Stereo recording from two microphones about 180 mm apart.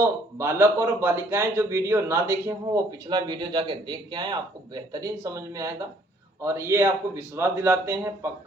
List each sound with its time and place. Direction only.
0.0 s speech: 15° right (ahead or behind)